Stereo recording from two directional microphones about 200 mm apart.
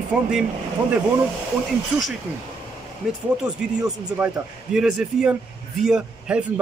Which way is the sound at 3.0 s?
Centre (ahead or behind).